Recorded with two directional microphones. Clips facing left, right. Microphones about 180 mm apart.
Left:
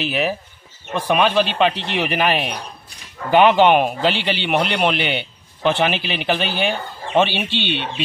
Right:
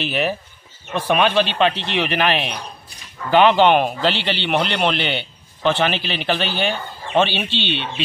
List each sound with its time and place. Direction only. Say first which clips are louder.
0.0 s a man's voice: even; 5° left (ahead or behind)
7.5 s speech: left 1 dB; 50° left (ahead or behind)